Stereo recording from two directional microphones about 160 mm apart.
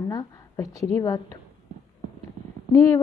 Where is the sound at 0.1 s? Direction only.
20° left (ahead or behind).